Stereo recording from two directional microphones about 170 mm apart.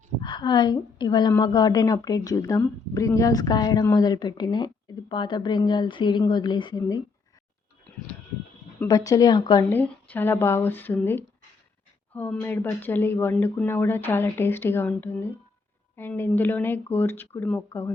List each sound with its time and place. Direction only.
0.2 s a woman's voice: 25° left (ahead or behind)
8.8 s a woman's voice: 20° left (ahead or behind)
9.6 s speech: 10° left (ahead or behind)